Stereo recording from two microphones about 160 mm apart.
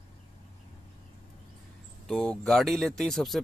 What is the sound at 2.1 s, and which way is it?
Speech, 5° left (ahead or behind).